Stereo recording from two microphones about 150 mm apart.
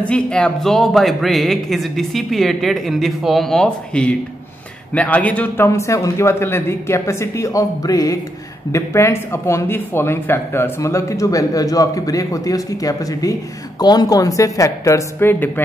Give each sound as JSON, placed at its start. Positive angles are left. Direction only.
{"t": 0.0, "sound": "speech", "side_deg": 5}